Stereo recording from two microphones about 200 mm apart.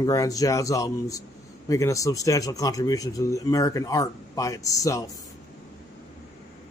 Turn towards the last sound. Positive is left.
turn(degrees=15)  # may be behind; listen again after turning